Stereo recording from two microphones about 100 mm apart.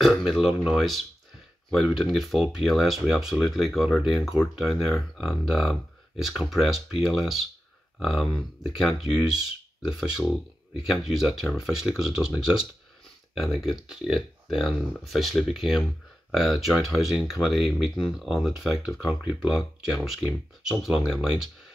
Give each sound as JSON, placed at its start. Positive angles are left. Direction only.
{"t": 0.0, "sound": "speech", "side_deg": 0}